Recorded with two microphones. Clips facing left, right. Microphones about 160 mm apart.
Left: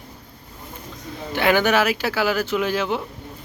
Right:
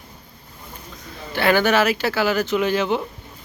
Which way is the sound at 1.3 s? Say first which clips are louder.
Right 1 dB; 15° left (ahead or behind).